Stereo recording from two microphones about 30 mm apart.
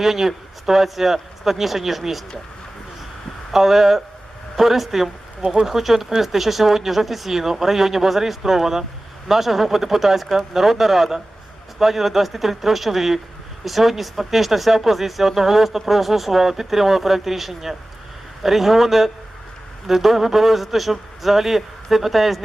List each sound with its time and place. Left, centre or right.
0.0 s speech: centre
3.5 s speech: centre